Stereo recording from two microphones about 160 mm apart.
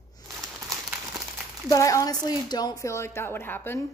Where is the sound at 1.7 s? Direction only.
20° left (ahead or behind).